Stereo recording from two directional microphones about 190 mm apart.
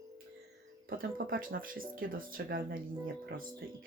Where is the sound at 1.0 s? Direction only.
50° right (ahead or behind).